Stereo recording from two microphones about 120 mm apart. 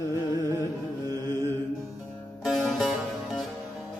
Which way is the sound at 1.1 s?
20° left (ahead or behind).